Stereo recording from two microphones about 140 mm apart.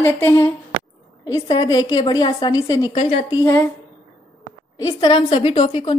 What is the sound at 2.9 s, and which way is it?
Speech, 50° left (ahead or behind).